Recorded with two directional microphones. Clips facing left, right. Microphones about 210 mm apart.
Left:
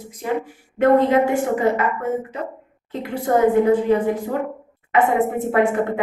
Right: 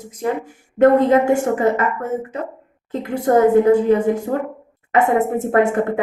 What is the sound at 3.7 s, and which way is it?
A woman's voice, 45° right (ahead or behind).